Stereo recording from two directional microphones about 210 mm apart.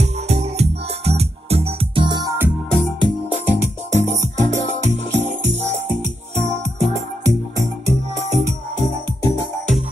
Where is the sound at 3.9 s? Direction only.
35° right (ahead or behind).